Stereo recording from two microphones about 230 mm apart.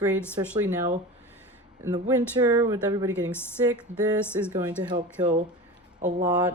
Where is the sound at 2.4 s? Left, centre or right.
Centre.